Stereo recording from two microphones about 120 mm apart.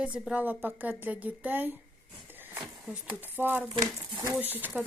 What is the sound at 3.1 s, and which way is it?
Speech, 15° right (ahead or behind).